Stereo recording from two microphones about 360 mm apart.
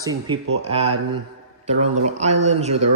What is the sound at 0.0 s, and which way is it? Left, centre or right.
Speech, centre.